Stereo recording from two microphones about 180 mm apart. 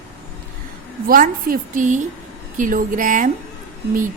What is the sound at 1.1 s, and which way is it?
A woman's voice, 50° right (ahead or behind).